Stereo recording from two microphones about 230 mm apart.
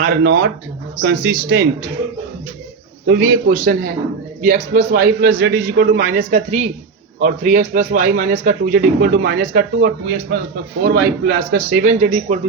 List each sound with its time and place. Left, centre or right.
0.0 s speech: right
3.1 s a man's voice: right